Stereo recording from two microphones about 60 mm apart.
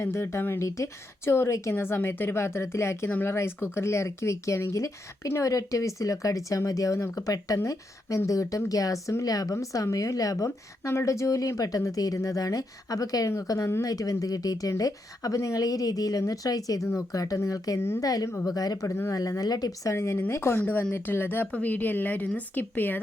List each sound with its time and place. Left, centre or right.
0.0 s speech: left
7.6 s speech: left
16.9 s speech: left
17.7 s speech: left
18.0 s speech: left
18.9 s speech: left
19.4 s speech: left
19.9 s a woman's voice: left